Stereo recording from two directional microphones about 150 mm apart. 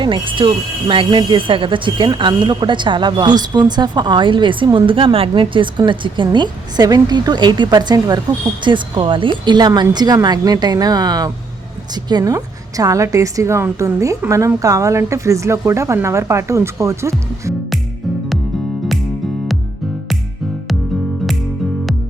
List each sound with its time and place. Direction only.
0.0 s a woman's voice: 35° right (ahead or behind)